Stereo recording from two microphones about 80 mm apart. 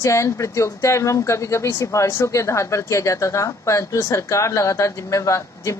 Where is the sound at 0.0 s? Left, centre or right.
Left.